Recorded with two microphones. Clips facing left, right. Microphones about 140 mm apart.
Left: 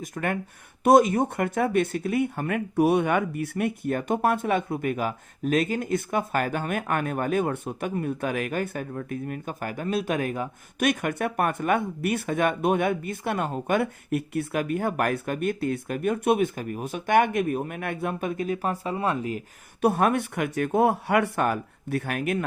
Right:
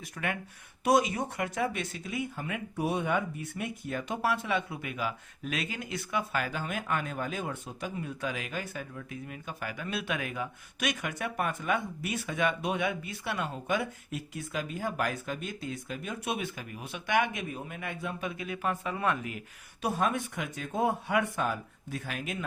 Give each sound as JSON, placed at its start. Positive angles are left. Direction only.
{"t": 0.0, "sound": "speech", "side_deg": 45}
{"t": 19.8, "sound": "speech", "side_deg": 60}